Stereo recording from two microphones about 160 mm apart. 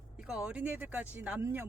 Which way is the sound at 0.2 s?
5° right (ahead or behind).